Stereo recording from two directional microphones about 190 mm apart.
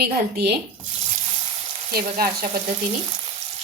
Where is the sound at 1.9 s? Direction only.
50° right (ahead or behind).